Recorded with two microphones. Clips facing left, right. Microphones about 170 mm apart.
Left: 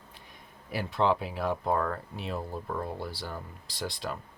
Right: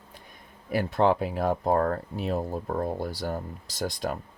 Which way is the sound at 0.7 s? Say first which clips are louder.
Right 4 dB; 50° right (ahead or behind).